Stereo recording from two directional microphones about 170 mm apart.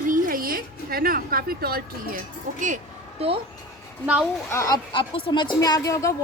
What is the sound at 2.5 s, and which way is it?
Speech, 50° right (ahead or behind).